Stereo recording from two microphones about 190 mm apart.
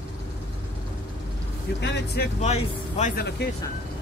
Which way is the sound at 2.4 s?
35° left (ahead or behind).